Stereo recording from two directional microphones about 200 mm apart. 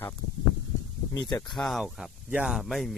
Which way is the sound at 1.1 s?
15° left (ahead or behind).